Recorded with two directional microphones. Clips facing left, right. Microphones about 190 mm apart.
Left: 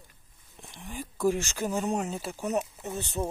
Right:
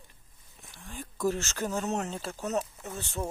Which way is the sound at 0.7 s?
15° left (ahead or behind).